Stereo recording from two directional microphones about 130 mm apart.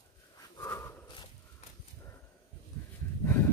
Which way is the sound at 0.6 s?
20° left (ahead or behind).